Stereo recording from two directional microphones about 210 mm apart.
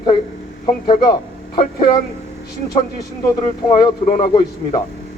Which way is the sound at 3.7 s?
20° left (ahead or behind).